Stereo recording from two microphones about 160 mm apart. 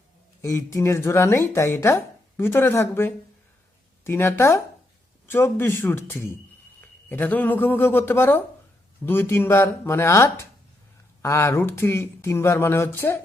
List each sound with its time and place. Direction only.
0.4 s speech: 20° left (ahead or behind)